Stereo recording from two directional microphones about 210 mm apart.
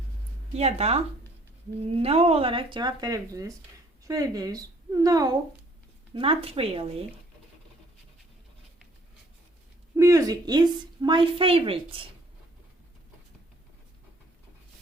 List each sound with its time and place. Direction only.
0.5 s a woman's voice: 30° right (ahead or behind)
10.0 s a woman's voice: 15° right (ahead or behind)